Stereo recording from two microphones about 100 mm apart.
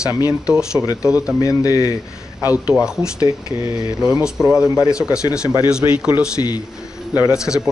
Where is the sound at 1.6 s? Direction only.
35° left (ahead or behind).